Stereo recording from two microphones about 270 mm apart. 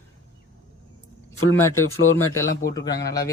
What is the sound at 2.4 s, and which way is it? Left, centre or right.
Speech, centre.